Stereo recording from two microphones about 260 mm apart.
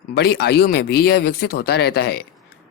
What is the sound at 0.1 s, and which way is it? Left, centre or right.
Speech, left.